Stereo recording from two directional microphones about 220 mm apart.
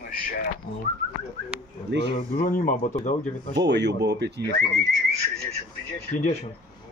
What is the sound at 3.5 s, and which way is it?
Speech, 55° right (ahead or behind).